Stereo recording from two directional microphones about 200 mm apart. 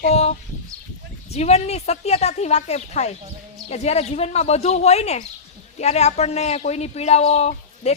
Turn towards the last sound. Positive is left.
turn(degrees=35)  # may be behind; listen again after turning